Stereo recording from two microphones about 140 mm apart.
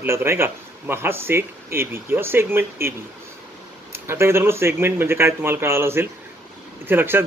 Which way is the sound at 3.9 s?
15° right (ahead or behind).